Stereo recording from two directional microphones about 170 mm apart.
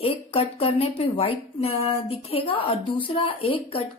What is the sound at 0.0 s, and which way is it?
Speech, 35° left (ahead or behind).